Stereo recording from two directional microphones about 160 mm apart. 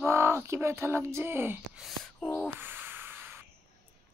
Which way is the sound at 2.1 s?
10° left (ahead or behind).